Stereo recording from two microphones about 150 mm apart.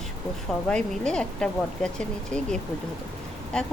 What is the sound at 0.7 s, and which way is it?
Speech, 5° left (ahead or behind).